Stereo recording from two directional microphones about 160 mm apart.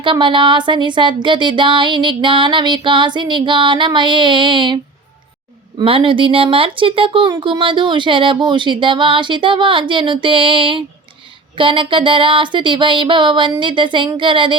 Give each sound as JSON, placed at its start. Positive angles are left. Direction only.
{"t": 0.0, "sound": "speech", "side_deg": -30}
{"t": 5.8, "sound": "speech", "side_deg": -35}